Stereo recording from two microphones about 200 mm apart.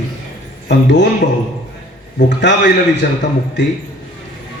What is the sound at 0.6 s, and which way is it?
Speech, 60° left (ahead or behind).